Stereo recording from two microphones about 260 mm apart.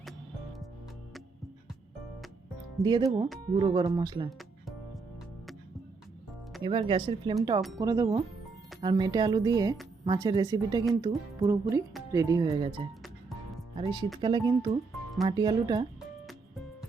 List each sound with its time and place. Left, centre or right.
2.8 s speech: centre
4.3 s music: centre
6.6 s speech: centre